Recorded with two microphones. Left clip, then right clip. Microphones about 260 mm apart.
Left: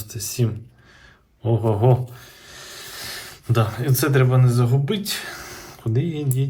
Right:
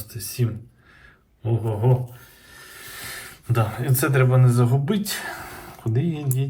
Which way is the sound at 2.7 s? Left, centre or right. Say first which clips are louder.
Left 2 dB; centre.